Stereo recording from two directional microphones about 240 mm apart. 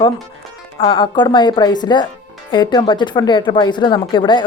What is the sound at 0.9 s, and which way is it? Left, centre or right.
Speech, centre.